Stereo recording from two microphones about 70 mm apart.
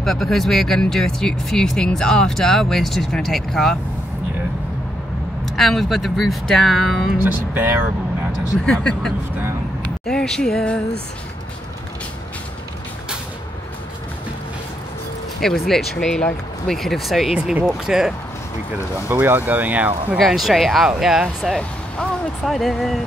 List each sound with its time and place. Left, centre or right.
0.0 s speech: centre
5.6 s speech: centre
7.5 s speech: right
8.6 s speech: centre
15.4 s speech: centre
19.0 s speech: right
20.2 s speech: centre
21.5 s a sound: centre
22.4 s speech: centre